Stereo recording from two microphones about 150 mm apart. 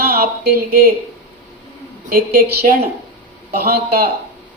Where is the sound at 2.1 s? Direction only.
85° right.